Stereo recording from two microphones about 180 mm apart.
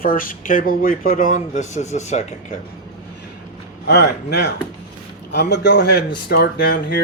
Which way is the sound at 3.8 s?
65° left (ahead or behind).